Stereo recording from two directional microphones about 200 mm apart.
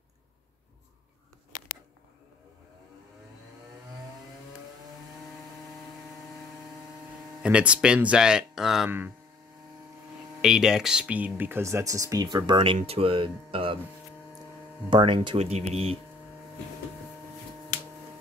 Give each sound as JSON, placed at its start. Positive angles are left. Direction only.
{"t": 7.4, "sound": "speech", "side_deg": -5}
{"t": 10.4, "sound": "speech", "side_deg": -5}
{"t": 14.9, "sound": "speech", "side_deg": -25}